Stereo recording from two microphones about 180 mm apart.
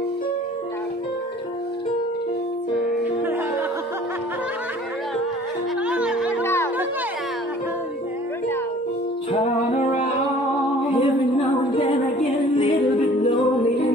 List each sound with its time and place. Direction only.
5.9 s music: 5° right (ahead or behind)
6.4 s music: 15° left (ahead or behind)
9.3 s music: 40° left (ahead or behind)
10.9 s music: 30° left (ahead or behind)